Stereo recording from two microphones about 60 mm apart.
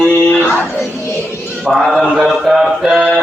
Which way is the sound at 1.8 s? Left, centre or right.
Centre.